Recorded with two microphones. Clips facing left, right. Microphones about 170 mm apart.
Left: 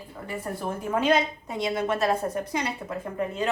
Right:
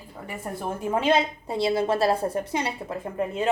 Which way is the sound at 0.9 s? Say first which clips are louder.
Right 1 dB; 30° right (ahead or behind).